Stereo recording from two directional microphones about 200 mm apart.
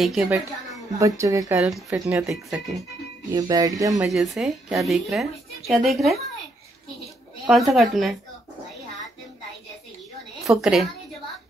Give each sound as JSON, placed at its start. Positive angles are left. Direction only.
{"t": 0.0, "sound": "a woman's voice", "side_deg": 0}
{"t": 0.9, "sound": "speech", "side_deg": -15}
{"t": 1.9, "sound": "a woman's voice", "side_deg": -5}
{"t": 3.3, "sound": "speech", "side_deg": -20}
{"t": 4.1, "sound": "a woman's voice", "side_deg": 0}
{"t": 7.4, "sound": "a woman's voice", "side_deg": 0}
{"t": 10.4, "sound": "a woman's voice", "side_deg": -5}